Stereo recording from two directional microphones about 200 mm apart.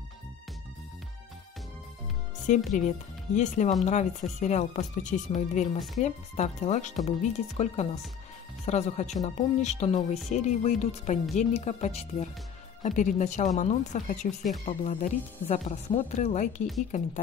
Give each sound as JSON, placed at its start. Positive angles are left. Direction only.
{"t": 2.4, "sound": "speech", "side_deg": 40}